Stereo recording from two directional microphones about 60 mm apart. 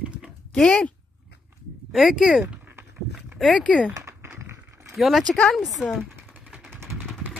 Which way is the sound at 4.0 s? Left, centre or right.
Right.